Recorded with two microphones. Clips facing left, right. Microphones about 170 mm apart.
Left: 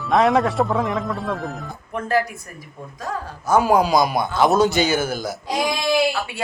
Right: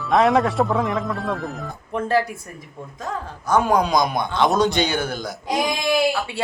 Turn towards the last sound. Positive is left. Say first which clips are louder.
# even
turn(degrees=-15)  # may be behind; listen again after turning